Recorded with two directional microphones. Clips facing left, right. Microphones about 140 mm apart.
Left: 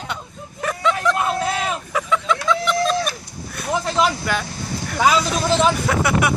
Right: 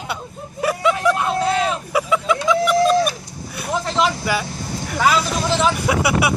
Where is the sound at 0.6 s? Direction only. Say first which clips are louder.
Right 3 dB; 10° right (ahead or behind).